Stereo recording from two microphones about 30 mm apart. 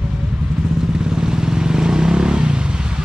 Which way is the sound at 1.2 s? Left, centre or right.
Right.